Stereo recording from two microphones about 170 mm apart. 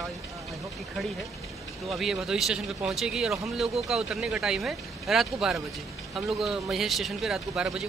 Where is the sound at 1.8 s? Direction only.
Centre (ahead or behind).